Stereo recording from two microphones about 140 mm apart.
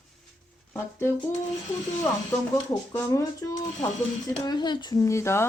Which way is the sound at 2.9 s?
20° left (ahead or behind).